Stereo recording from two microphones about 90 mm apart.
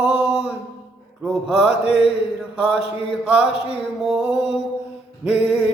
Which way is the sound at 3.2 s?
10° right (ahead or behind).